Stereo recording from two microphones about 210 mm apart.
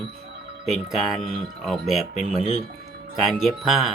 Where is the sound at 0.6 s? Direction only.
Centre (ahead or behind).